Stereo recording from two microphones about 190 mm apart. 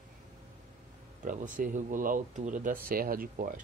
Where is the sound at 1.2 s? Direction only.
45° right (ahead or behind).